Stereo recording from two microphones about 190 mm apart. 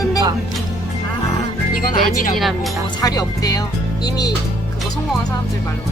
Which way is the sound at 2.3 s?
Centre (ahead or behind).